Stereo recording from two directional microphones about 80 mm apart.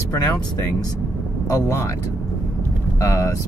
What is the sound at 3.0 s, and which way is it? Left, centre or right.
Speech, left.